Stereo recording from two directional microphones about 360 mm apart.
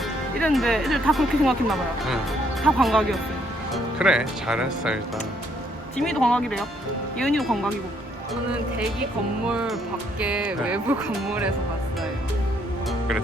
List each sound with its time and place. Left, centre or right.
0.3 s speech: centre
6.0 s speech: centre
9.5 s speech: centre